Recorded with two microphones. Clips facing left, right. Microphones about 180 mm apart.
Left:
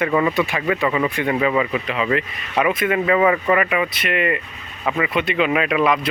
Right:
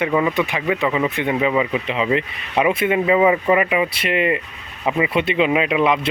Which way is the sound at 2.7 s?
30° right (ahead or behind).